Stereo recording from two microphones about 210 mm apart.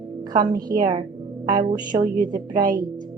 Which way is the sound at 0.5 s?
45° right (ahead or behind).